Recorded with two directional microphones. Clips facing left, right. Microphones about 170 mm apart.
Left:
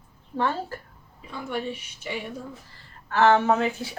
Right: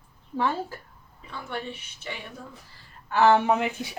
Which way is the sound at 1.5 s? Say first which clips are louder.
Left 4 dB; 10° left (ahead or behind).